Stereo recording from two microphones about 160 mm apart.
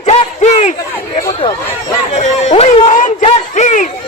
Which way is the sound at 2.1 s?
45° left (ahead or behind).